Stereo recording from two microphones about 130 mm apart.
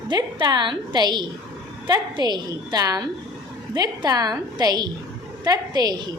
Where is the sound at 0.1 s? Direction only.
35° right (ahead or behind).